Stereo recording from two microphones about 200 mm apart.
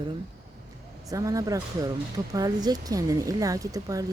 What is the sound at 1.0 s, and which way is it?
Speech, 15° right (ahead or behind).